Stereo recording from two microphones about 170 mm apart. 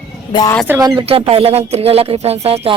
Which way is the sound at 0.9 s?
35° right (ahead or behind).